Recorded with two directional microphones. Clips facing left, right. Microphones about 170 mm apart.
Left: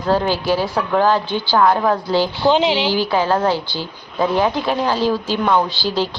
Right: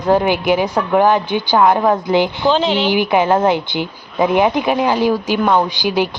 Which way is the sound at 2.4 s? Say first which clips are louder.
Even; 15° left (ahead or behind).